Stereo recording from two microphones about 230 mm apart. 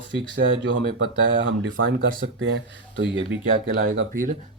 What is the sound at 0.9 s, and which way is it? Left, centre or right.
Speech, right.